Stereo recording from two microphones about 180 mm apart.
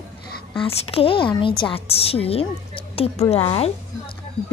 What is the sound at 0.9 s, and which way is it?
A woman's voice, 30° left (ahead or behind).